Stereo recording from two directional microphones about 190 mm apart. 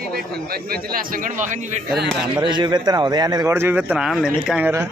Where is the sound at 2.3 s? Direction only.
25° right (ahead or behind).